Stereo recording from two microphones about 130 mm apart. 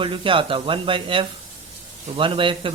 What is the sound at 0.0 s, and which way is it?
Speech, 40° right (ahead or behind).